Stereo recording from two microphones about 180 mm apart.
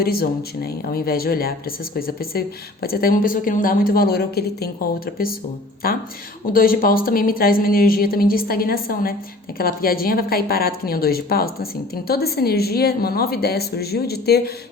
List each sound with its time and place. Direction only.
0.0 s a woman's voice: 55° left (ahead or behind)